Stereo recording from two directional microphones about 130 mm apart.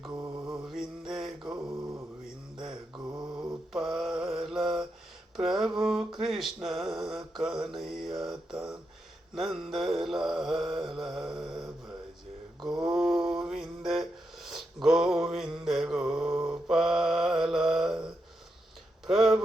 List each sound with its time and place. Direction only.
0.1 s mantra: 20° right (ahead or behind)
0.6 s mantra: centre (ahead or behind)
1.5 s mantra: 25° right (ahead or behind)
2.2 s mantra: 5° right (ahead or behind)
2.9 s mantra: 30° right (ahead or behind)
3.7 s mantra: centre (ahead or behind)
5.4 s a sound: centre (ahead or behind)
7.8 s mantra: centre (ahead or behind)
19.0 s a sound: centre (ahead or behind)